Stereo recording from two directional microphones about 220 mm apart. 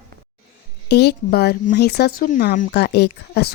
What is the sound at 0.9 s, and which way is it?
A woman's voice, 50° left (ahead or behind).